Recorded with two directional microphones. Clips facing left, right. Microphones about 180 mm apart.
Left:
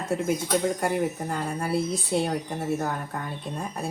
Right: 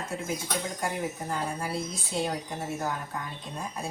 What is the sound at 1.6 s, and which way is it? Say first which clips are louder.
Speech: left 7 dB; 65° left (ahead or behind).